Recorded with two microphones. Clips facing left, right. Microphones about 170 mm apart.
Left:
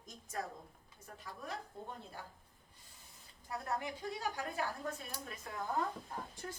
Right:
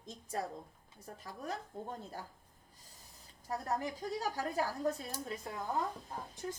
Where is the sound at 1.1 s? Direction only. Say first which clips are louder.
Right 4 dB; 35° right (ahead or behind).